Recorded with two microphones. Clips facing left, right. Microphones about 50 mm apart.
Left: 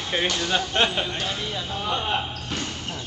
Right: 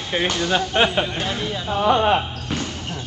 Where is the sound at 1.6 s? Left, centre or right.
Right.